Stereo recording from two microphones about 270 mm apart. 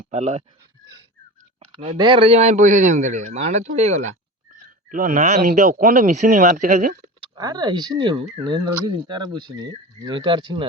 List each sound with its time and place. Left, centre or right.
0.0 s speech: right
2.0 s speech: centre
7.3 s speech: centre